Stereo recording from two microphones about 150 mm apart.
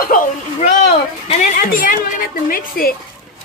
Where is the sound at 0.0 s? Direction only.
70° left (ahead or behind).